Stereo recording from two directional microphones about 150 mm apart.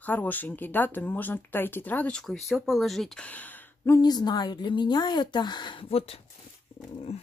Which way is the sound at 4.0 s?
25° left (ahead or behind).